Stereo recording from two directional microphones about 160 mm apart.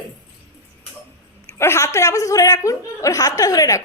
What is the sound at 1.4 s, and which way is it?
A woman's voice, 15° left (ahead or behind).